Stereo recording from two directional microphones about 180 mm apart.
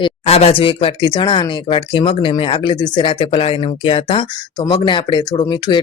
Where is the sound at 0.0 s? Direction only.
35° left (ahead or behind).